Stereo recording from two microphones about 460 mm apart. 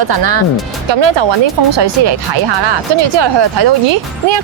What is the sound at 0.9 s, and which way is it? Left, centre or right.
Speech, right.